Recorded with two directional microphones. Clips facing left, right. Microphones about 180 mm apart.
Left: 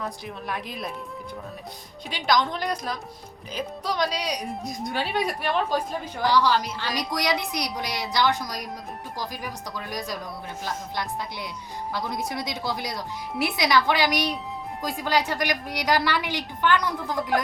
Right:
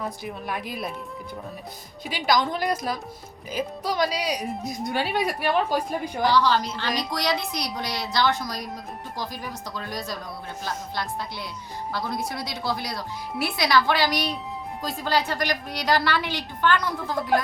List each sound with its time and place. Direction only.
0.0 s a woman's voice: 5° right (ahead or behind)
2.0 s a woman's voice: 5° right (ahead or behind)
6.2 s a woman's voice: 10° left (ahead or behind)